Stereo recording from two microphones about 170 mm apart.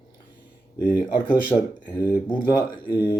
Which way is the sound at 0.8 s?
10° right (ahead or behind).